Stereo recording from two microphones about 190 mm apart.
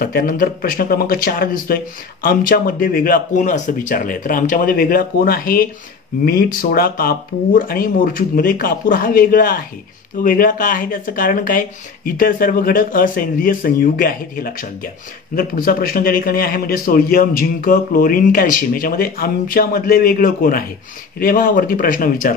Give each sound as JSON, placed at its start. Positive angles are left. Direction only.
{"t": 0.0, "sound": "a man's voice", "side_deg": 50}